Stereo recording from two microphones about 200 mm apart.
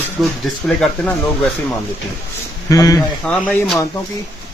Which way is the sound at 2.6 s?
15° left (ahead or behind).